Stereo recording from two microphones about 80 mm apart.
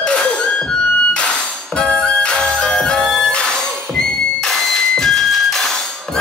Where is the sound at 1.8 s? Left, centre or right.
Centre.